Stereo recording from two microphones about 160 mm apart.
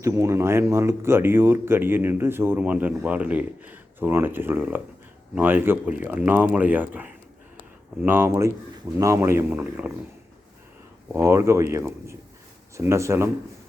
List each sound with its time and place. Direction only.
0.0 s speech: 15° right (ahead or behind)
11.1 s speech: 15° right (ahead or behind)